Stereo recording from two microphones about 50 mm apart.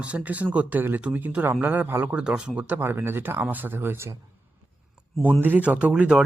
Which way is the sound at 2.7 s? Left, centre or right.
Right.